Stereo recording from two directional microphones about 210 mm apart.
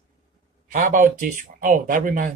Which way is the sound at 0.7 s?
40° right (ahead or behind).